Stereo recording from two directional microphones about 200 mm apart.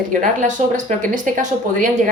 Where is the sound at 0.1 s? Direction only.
40° right (ahead or behind).